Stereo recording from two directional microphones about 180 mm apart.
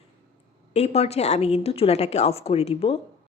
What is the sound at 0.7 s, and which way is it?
A woman's voice, 35° left (ahead or behind).